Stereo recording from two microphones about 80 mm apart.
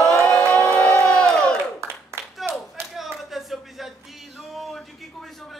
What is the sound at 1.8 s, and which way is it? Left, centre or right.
Clapping, right.